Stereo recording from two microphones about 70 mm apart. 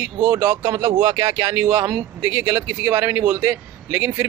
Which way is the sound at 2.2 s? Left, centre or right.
Right.